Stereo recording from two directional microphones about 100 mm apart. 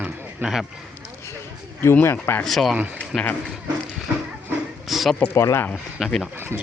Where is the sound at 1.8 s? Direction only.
25° left (ahead or behind).